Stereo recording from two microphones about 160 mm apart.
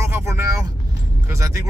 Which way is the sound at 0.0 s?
15° right (ahead or behind).